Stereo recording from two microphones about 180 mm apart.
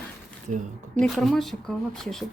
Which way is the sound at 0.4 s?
45° right (ahead or behind).